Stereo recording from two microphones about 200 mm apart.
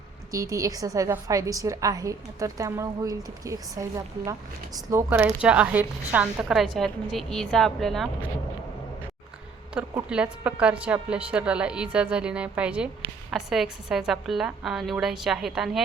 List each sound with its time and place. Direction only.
0.3 s a woman's voice: 15° right (ahead or behind); by 8.1 s centre (ahead or behind)
9.7 s a woman's voice: 5° right (ahead or behind)